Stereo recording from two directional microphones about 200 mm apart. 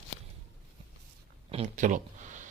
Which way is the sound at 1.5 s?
35° right (ahead or behind).